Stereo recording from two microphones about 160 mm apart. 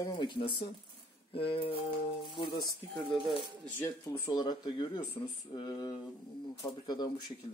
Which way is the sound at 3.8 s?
20° left (ahead or behind).